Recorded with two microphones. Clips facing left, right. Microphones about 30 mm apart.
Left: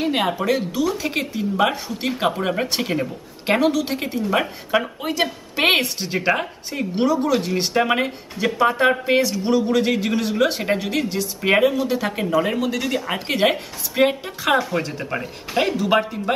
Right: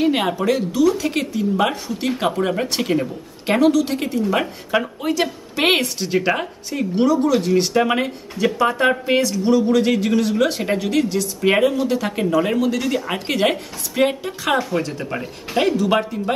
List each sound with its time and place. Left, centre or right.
0.0 s speech: centre
0.4 s a woman's voice: centre